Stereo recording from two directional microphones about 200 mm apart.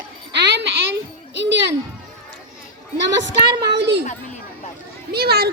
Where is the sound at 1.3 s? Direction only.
60° right (ahead or behind).